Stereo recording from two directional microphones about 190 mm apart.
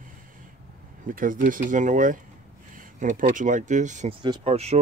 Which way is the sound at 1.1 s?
45° right (ahead or behind).